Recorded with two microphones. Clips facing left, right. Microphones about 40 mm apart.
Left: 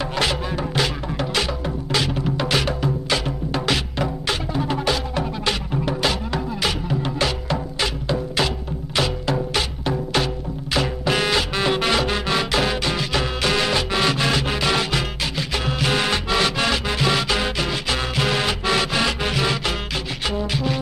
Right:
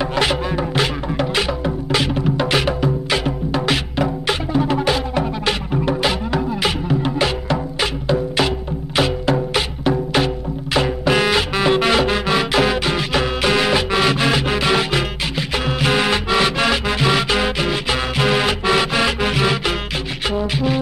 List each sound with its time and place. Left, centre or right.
0.0 s music: centre